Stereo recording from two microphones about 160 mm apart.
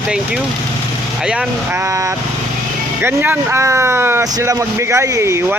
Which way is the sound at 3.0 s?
15° right (ahead or behind).